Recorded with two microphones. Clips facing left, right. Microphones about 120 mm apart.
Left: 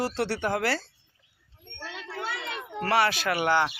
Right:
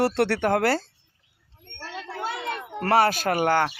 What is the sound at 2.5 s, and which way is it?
Speech, 45° right (ahead or behind).